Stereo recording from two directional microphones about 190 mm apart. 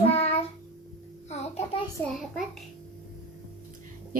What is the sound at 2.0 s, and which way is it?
Speech, 10° left (ahead or behind).